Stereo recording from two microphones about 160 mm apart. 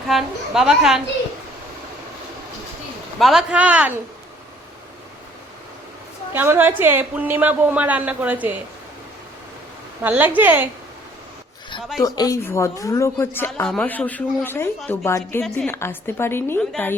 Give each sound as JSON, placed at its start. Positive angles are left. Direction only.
{"t": 0.1, "sound": "a woman's voice", "side_deg": 0}
{"t": 3.2, "sound": "a woman's voice", "side_deg": 0}
{"t": 6.3, "sound": "a woman's voice", "side_deg": -15}
{"t": 10.0, "sound": "a woman's voice", "side_deg": -10}
{"t": 11.9, "sound": "a woman's voice", "side_deg": 25}